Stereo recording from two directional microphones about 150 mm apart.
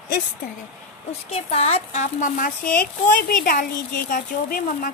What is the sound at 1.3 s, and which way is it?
Speech, 45° left (ahead or behind).